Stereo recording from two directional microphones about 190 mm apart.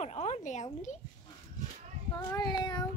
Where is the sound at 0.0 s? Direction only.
35° left (ahead or behind).